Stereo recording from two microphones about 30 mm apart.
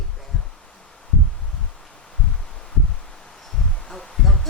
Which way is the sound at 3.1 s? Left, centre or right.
Centre.